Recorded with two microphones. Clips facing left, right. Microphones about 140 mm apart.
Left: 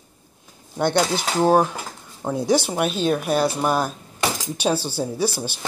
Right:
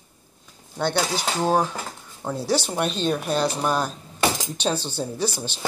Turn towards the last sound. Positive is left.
turn(degrees=10)  # may be behind; listen again after turning